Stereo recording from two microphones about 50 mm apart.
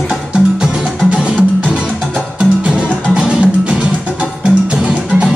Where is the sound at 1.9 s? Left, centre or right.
Centre.